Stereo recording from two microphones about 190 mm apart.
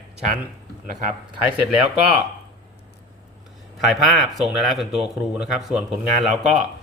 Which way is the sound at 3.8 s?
Centre (ahead or behind).